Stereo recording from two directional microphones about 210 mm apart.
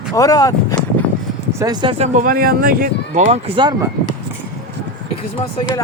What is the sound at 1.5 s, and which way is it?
Speech, 15° right (ahead or behind).